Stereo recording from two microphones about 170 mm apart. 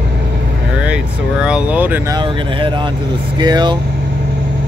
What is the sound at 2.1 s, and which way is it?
Speech, 30° right (ahead or behind).